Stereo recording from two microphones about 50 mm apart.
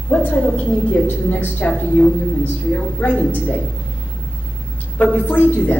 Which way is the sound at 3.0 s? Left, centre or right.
Left.